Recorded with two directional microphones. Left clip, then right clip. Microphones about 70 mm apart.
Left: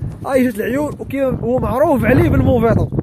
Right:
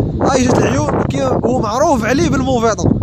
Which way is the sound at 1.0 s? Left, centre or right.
Right.